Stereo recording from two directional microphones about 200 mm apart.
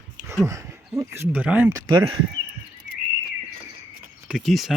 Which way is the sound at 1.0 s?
10° right (ahead or behind).